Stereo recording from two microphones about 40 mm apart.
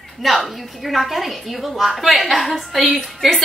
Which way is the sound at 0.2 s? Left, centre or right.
Centre.